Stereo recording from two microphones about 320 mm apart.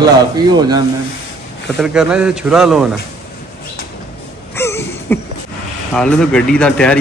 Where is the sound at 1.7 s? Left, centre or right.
Centre.